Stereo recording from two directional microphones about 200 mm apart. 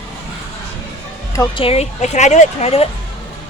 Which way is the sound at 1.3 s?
15° left (ahead or behind).